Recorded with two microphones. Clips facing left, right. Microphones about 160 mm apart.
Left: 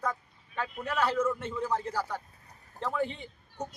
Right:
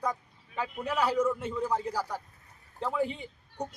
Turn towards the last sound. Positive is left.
turn(degrees=-10)  # may be behind; listen again after turning